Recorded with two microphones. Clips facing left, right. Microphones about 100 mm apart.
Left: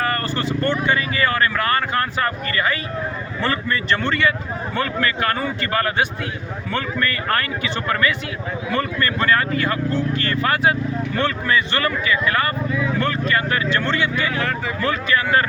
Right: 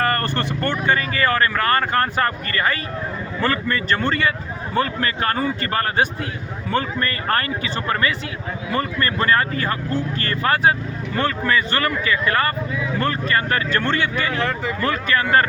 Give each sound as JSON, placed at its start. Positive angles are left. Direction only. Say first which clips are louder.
{"t": 0.0, "sound": "speech", "louder": "right 1 dB", "side_deg": -55}